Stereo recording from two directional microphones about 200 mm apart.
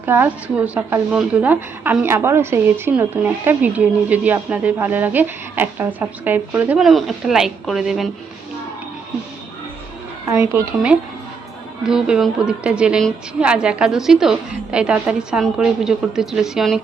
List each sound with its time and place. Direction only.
0.0 s a woman's voice: 10° right (ahead or behind)
10.2 s a woman's voice: 15° right (ahead or behind)
11.8 s a woman's voice: 5° right (ahead or behind)